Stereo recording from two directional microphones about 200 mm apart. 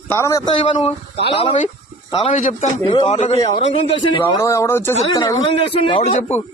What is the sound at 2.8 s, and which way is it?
Speech, 25° left (ahead or behind).